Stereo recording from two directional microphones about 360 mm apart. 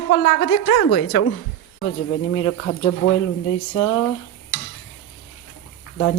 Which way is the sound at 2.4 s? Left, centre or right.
Left.